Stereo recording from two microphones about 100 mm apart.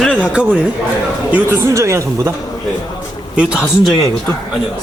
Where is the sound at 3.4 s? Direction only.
10° right (ahead or behind).